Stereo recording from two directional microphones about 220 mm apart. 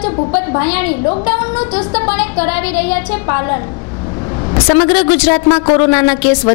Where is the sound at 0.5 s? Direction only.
25° left (ahead or behind).